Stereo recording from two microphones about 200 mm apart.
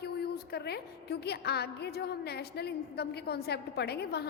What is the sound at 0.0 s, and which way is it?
A woman's voice, 55° left (ahead or behind).